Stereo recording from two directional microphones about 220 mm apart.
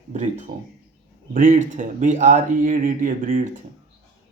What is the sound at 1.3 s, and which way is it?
Speech, 35° right (ahead or behind).